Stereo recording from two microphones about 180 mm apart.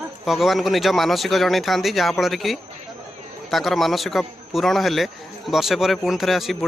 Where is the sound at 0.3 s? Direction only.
Centre (ahead or behind).